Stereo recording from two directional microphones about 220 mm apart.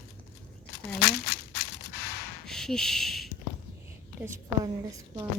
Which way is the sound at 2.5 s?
Centre (ahead or behind).